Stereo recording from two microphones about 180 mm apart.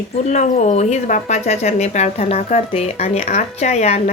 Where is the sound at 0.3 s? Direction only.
45° left (ahead or behind).